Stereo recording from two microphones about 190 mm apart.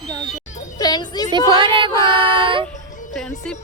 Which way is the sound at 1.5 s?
25° right (ahead or behind).